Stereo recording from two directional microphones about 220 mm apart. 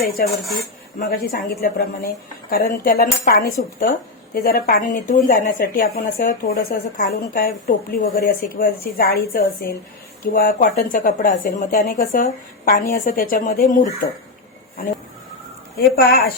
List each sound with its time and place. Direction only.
0.3 s speech: centre (ahead or behind)
0.9 s a woman's voice: 40° left (ahead or behind)
16.0 s a woman's voice: 45° left (ahead or behind)